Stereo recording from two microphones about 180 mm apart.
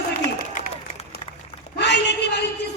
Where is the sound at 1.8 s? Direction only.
70° left (ahead or behind).